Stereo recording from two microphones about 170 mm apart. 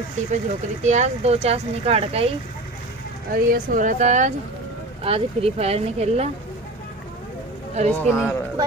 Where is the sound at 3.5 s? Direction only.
50° right (ahead or behind).